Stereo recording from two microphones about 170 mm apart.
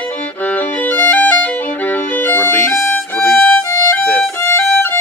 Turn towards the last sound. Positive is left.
turn(degrees=10)  # may be behind; listen again after turning